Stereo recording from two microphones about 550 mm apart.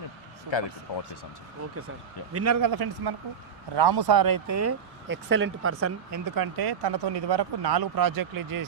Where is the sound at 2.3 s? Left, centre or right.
Right.